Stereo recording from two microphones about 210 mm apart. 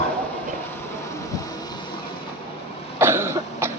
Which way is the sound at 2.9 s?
10° right (ahead or behind).